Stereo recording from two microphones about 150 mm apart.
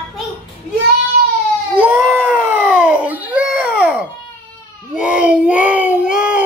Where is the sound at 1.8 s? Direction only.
10° right (ahead or behind).